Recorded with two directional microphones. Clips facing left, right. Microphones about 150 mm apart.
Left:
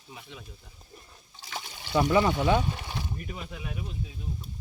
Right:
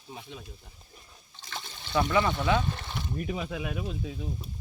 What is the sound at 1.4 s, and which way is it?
Trickle, 10° left (ahead or behind).